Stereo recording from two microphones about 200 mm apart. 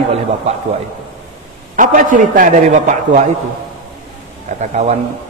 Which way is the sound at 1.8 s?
40° right (ahead or behind).